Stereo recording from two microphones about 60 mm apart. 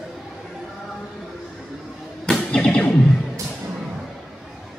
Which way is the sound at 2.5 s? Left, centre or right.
Left.